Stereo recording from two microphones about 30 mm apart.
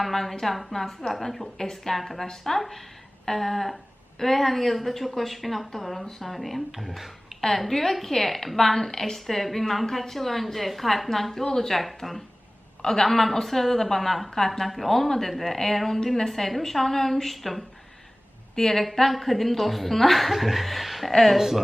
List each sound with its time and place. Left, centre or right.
0.0 s a woman's voice: centre
0.7 s a woman's voice: centre
1.5 s a woman's voice: centre
6.1 s a woman's voice: centre
14.7 s a woman's voice: centre
18.5 s a woman's voice: centre
21.3 s speech: centre